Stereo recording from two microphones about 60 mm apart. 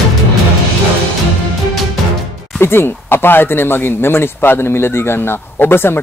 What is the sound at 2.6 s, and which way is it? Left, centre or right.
Speech, left.